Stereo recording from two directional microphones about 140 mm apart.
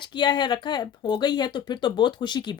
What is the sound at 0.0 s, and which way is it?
A woman's voice, 35° left (ahead or behind).